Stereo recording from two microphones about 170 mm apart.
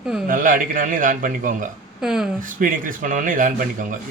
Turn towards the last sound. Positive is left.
turn(degrees=-50)  # may be behind; listen again after turning